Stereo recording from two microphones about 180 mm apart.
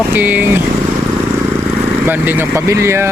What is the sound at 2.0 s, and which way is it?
Speech, 10° right (ahead or behind).